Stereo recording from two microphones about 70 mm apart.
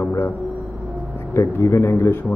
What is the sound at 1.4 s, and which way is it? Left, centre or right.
Speech, left.